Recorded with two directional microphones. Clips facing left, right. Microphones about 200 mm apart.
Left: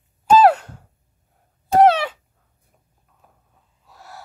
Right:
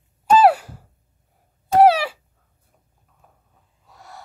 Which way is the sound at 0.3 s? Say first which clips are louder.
Left 1 dB; 5° right (ahead or behind).